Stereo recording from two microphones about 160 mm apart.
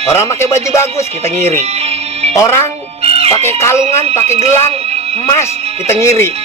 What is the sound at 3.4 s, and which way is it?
Speech, 15° left (ahead or behind).